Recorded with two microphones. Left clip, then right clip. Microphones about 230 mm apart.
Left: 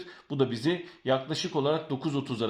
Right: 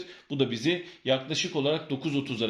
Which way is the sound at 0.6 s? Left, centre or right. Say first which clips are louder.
Right 1 dB; centre.